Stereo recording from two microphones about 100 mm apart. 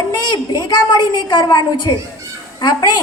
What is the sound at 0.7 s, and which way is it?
A woman's voice, 45° left (ahead or behind).